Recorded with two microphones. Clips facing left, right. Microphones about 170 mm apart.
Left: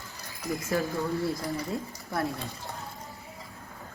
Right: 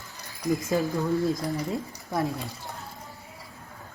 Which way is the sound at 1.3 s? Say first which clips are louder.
Right 3 dB; 15° right (ahead or behind).